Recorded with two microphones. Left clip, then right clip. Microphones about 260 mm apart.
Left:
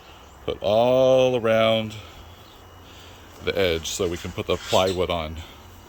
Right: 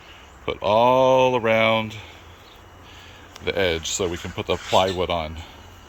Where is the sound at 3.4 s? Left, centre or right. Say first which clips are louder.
Even; centre.